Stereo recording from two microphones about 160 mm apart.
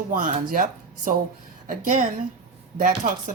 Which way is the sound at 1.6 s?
55° right (ahead or behind).